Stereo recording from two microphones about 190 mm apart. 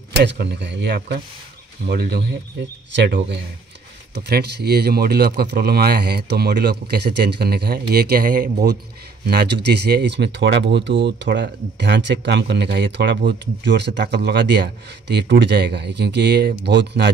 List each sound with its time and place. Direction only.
0.2 s speech: 65° right (ahead or behind); by 8.6 s 45° right (ahead or behind)
9.2 s speech: 60° right (ahead or behind)